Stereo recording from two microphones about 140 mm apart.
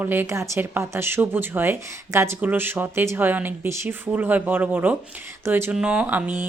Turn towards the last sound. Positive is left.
turn(degrees=-10)  # may be behind; listen again after turning